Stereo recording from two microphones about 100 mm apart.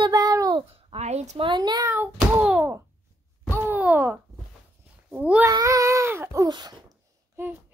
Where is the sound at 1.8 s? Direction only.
20° right (ahead or behind).